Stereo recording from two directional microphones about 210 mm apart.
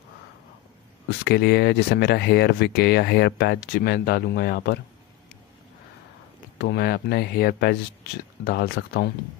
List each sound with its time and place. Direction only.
1.2 s speech: 50° left (ahead or behind)
6.6 s speech: 50° left (ahead or behind)